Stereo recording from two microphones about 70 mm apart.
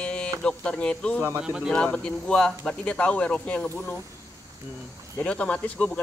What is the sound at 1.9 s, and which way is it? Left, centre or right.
Speech, centre.